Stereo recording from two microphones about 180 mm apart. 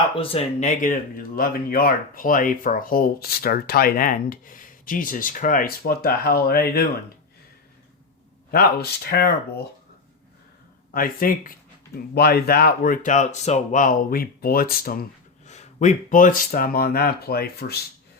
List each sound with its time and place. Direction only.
0.2 s speech: 35° left (ahead or behind); by 6.8 s 60° left (ahead or behind)
8.4 s speech: 55° left (ahead or behind)
10.9 s speech: 50° left (ahead or behind)
15.4 s speech: 40° left (ahead or behind); by 17.7 s 60° left (ahead or behind)